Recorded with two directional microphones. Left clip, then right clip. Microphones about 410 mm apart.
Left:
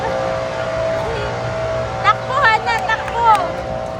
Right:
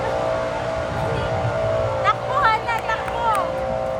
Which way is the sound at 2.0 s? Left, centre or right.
Left.